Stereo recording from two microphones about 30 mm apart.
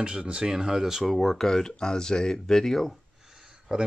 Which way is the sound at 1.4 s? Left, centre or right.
Centre.